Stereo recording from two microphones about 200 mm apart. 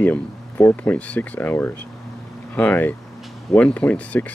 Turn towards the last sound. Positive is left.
turn(degrees=5)  # may be behind; listen again after turning